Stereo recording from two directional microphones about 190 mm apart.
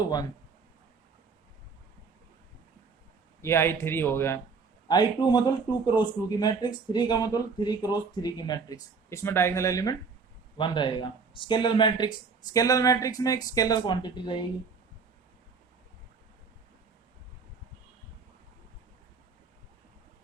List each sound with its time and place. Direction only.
3.4 s speech: 15° left (ahead or behind)